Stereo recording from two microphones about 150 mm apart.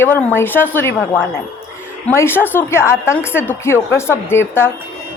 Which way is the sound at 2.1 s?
15° left (ahead or behind).